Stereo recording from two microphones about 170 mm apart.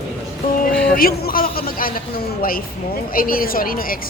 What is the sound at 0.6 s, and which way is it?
A man's voice, 60° left (ahead or behind).